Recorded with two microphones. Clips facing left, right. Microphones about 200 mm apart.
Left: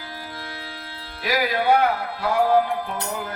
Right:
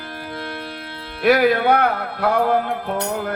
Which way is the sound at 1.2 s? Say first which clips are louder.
Right 6 dB; 60° right (ahead or behind).